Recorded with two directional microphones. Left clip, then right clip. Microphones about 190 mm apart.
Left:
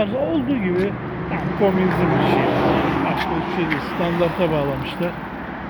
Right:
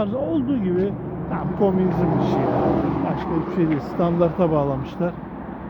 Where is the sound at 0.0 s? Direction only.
10° right (ahead or behind).